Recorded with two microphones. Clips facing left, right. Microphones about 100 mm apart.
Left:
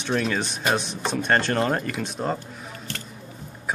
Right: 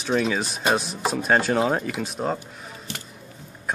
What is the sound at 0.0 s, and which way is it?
Speech, centre (ahead or behind).